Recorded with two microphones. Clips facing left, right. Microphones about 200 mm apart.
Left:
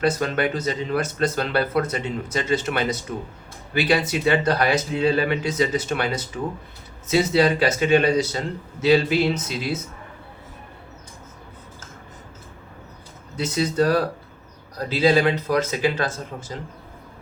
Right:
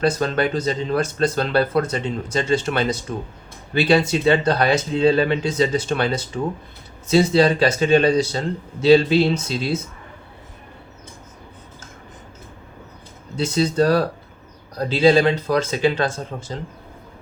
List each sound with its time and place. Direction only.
0.0 s speech: 30° right (ahead or behind)
13.3 s speech: 30° right (ahead or behind)
16.3 s speech: 55° right (ahead or behind)